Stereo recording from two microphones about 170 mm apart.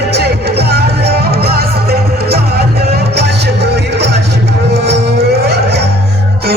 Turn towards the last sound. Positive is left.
turn(degrees=-70)  # may be behind; listen again after turning